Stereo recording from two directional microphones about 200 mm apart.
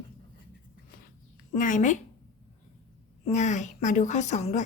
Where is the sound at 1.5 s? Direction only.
40° left (ahead or behind).